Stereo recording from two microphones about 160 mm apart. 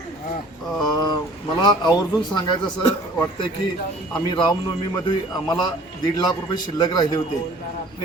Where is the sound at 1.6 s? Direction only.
25° left (ahead or behind).